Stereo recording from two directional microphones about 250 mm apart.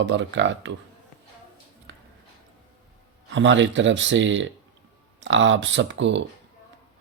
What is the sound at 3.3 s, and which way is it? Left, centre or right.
Speech, right.